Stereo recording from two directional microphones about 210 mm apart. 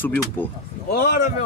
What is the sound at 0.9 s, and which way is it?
Speech, 45° left (ahead or behind).